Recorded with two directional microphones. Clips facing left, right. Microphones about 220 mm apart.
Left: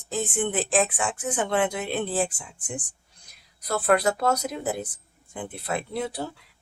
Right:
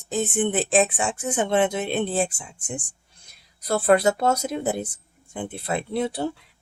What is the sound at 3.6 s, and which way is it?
Speech, 25° right (ahead or behind).